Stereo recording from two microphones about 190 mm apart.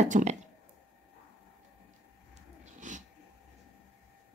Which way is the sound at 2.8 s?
40° right (ahead or behind).